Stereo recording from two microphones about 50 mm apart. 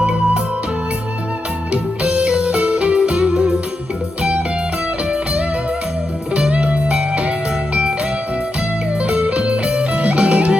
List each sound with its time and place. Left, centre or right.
0.0 s music: right
1.7 s music: right
9.0 s music: right